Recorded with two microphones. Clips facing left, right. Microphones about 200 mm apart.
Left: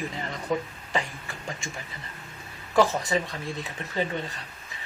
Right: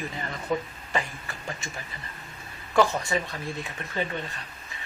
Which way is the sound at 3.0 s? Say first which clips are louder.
Left 2 dB; 20° left (ahead or behind).